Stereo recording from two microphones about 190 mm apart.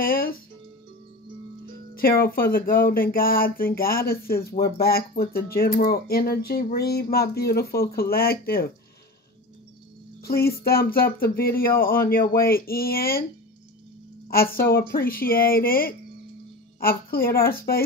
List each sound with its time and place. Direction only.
0.0 s music: 50° left (ahead or behind)
2.0 s speech: 50° left (ahead or behind)
10.2 s speech: 55° left (ahead or behind)
14.3 s speech: 50° left (ahead or behind)